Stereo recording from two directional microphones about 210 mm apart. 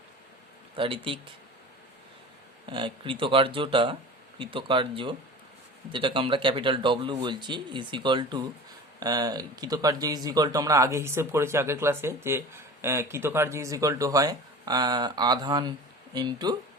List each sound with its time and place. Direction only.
0.8 s speech: 25° right (ahead or behind)
2.6 s speech: 25° right (ahead or behind)